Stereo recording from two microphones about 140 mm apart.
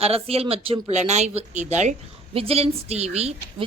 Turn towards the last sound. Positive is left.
turn(degrees=-50)  # may be behind; listen again after turning